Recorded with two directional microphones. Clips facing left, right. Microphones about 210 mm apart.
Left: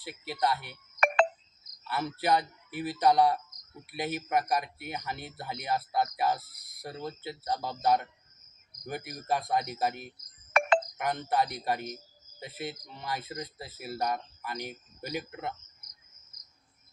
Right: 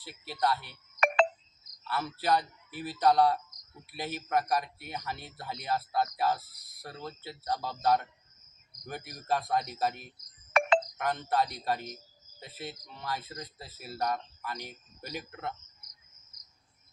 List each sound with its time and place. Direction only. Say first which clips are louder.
0.0 s speech: left 1 dB; 15° left (ahead or behind)
0.7 s music: left 1 dB; 55° left (ahead or behind)
1.9 s speech: left 1 dB; 15° left (ahead or behind)
9.1 s speech: even; 15° left (ahead or behind)
10.9 s speech: left 1 dB; 10° left (ahead or behind)